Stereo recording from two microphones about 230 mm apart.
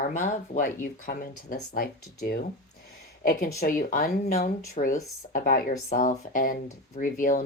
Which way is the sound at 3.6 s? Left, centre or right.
Left.